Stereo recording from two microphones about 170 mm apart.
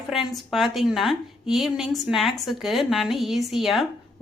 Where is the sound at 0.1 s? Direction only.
Centre (ahead or behind).